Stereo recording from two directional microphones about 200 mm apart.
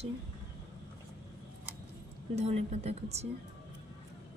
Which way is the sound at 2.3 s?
35° right (ahead or behind).